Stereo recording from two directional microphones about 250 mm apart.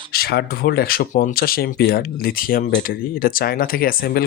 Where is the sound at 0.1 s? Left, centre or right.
Left.